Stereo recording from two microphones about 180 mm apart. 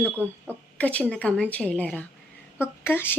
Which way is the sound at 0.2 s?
10° left (ahead or behind).